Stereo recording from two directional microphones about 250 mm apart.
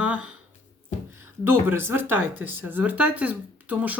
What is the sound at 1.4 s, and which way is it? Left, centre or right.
Speech, centre.